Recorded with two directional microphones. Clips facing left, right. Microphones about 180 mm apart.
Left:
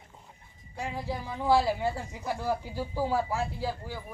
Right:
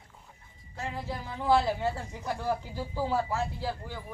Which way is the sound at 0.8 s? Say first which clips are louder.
Left 2 dB; 15° left (ahead or behind).